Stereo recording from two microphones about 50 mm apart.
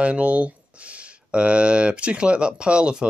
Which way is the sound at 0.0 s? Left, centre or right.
Right.